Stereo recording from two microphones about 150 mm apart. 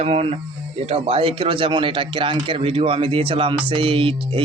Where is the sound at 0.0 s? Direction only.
40° right (ahead or behind).